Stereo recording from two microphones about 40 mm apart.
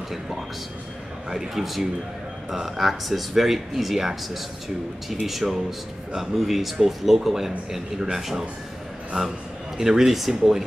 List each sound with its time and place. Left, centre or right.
1.3 s speech: centre
9.1 s a man's voice: right
9.8 s speech: centre